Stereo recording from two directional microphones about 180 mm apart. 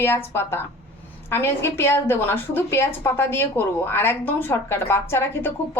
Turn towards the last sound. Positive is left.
turn(degrees=10)  # may be behind; listen again after turning